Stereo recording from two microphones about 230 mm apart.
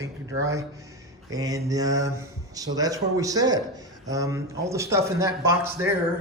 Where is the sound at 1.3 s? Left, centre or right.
Centre.